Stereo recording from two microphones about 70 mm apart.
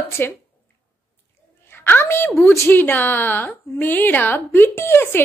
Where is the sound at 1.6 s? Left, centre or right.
Left.